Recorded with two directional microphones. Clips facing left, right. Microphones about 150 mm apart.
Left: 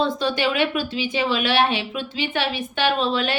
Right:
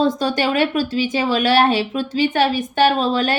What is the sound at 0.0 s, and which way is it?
Speech, 45° right (ahead or behind).